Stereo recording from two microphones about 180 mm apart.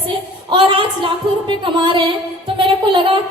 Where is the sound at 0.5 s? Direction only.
30° right (ahead or behind).